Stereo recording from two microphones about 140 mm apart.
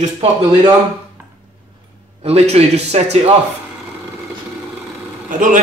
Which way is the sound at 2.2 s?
50° right (ahead or behind).